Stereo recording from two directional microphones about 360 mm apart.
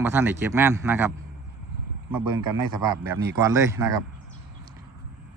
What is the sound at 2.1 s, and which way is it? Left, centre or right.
Speech, right.